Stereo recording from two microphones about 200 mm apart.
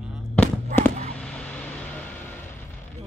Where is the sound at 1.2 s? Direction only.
5° left (ahead or behind).